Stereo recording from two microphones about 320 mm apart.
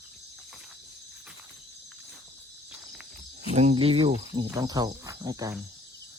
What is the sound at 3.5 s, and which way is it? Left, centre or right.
Cricket, centre.